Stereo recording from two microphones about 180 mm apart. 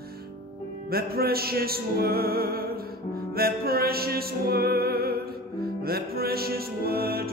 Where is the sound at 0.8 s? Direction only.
60° right (ahead or behind).